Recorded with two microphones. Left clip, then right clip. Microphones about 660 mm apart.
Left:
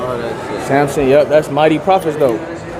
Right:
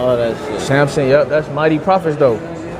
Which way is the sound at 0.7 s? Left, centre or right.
Right.